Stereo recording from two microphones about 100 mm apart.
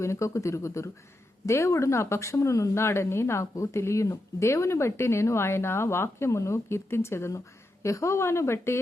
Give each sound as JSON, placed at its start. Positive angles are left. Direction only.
{"t": 0.0, "sound": "speech", "side_deg": 30}